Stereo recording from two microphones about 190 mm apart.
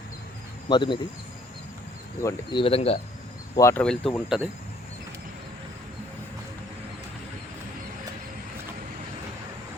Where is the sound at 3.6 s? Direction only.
15° left (ahead or behind).